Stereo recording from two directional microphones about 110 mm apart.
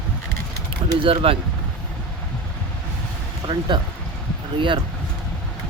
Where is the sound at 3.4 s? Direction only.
45° right (ahead or behind).